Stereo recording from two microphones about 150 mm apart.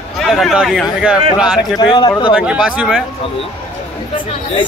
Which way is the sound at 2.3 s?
5° right (ahead or behind).